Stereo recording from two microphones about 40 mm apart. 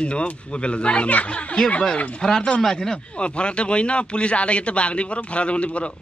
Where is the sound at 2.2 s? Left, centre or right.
Centre.